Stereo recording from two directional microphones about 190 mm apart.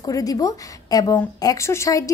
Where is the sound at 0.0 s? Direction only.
20° left (ahead or behind).